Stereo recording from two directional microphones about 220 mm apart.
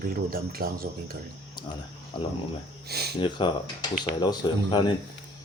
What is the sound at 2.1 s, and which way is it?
Speech, 20° left (ahead or behind).